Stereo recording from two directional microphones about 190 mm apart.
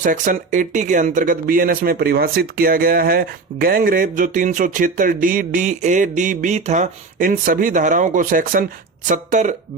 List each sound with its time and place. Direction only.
0.0 s speech: 45° right (ahead or behind)